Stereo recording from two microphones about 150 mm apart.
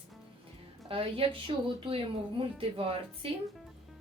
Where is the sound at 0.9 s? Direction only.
35° right (ahead or behind).